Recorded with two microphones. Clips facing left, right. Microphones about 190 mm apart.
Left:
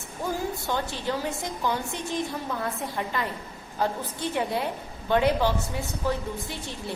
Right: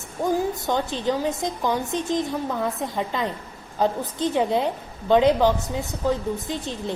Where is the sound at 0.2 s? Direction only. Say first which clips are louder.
Right 7 dB; 20° right (ahead or behind).